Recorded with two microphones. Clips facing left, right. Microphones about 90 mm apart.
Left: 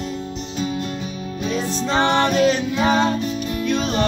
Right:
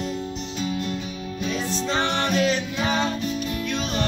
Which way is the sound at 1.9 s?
55° left (ahead or behind).